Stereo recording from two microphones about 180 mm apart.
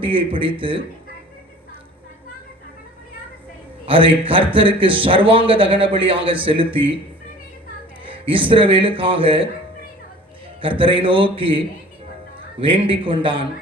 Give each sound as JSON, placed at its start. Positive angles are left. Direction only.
{"t": 0.0, "sound": "a man's voice", "side_deg": -30}
{"t": 3.8, "sound": "a man's voice", "side_deg": -30}
{"t": 8.0, "sound": "a man's voice", "side_deg": -30}
{"t": 10.6, "sound": "a man's voice", "side_deg": -30}